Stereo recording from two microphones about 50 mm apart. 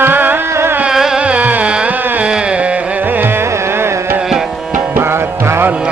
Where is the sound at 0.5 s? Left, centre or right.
Right.